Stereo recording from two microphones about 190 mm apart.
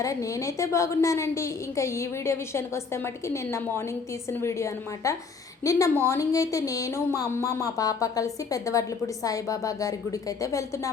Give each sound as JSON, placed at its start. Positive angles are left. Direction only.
{"t": 0.0, "sound": "speech", "side_deg": 15}